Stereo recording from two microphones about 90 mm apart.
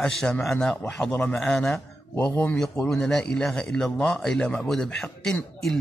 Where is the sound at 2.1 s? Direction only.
25° left (ahead or behind).